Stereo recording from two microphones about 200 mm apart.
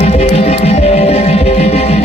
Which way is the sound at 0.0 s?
30° left (ahead or behind).